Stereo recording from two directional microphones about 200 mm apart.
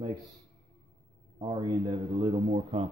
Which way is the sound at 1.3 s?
25° right (ahead or behind).